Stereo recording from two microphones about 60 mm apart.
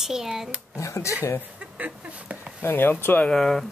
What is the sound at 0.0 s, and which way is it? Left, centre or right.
Speech, centre.